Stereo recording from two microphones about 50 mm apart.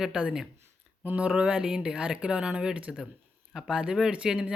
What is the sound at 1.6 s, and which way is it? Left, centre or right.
Speech, centre.